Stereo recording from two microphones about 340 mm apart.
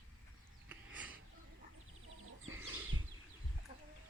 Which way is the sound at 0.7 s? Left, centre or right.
Centre.